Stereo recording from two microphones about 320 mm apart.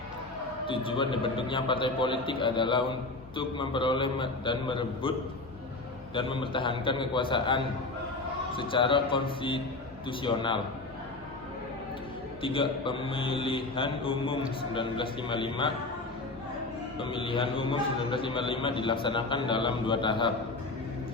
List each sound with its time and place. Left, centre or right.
0.7 s a man's voice: centre
6.1 s a man's voice: centre
12.4 s a man's voice: centre
17.0 s a man's voice: centre